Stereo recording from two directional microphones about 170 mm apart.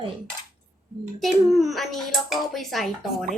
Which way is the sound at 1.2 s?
Centre (ahead or behind).